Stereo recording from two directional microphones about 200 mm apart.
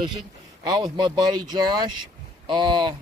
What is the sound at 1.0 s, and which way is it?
Speech, 20° right (ahead or behind).